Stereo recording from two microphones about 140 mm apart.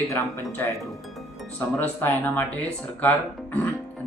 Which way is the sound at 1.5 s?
15° left (ahead or behind).